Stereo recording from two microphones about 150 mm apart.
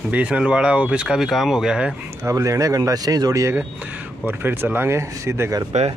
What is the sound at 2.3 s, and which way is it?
Speech, 20° right (ahead or behind).